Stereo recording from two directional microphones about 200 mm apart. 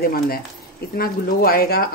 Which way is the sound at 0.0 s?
50° left (ahead or behind).